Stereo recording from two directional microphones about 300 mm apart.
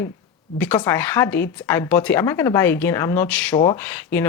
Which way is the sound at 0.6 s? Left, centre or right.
Centre.